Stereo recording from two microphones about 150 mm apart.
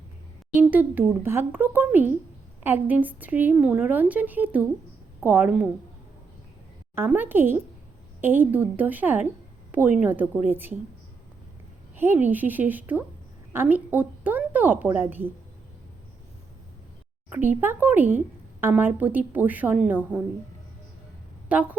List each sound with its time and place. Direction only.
0.5 s a woman's voice: 10° right (ahead or behind)
6.9 s a woman's voice: 15° right (ahead or behind)
11.9 s a woman's voice: 15° right (ahead or behind)
17.2 s a woman's voice: 10° right (ahead or behind)
21.5 s a woman's voice: 10° right (ahead or behind)